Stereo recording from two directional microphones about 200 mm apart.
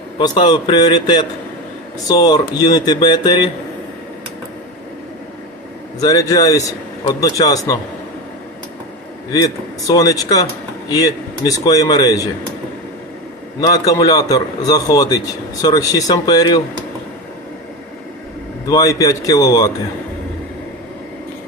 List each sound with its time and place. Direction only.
0.2 s a man's voice: 25° left (ahead or behind)
6.0 s speech: 15° left (ahead or behind)
9.3 s a man's voice: 20° left (ahead or behind)
13.6 s a man's voice: 20° left (ahead or behind)
18.6 s a man's voice: 20° left (ahead or behind)